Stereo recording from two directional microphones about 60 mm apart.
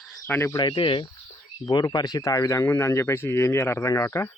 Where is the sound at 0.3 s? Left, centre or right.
Left.